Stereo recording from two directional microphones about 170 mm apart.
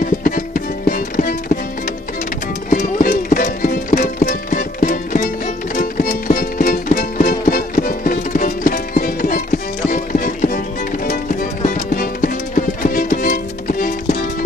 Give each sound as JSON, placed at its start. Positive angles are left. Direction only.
{"t": 0.8, "sound": "music", "side_deg": 55}
{"t": 2.7, "sound": "music", "side_deg": 50}
{"t": 11.6, "sound": "music", "side_deg": 50}